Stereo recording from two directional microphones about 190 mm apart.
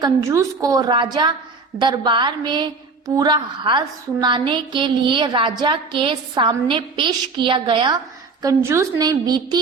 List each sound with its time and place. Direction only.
0.0 s a woman's voice: 15° right (ahead or behind)